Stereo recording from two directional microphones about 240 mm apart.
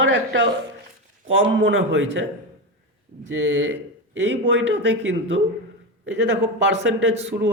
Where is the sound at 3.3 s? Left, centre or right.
Right.